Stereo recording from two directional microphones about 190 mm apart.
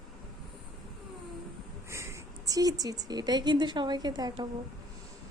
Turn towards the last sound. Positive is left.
turn(degrees=-20)  # may be behind; listen again after turning